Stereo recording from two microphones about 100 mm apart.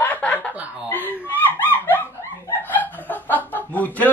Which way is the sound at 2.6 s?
20° left (ahead or behind).